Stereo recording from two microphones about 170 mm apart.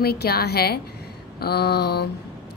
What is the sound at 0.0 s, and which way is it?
A woman's voice, 65° left (ahead or behind).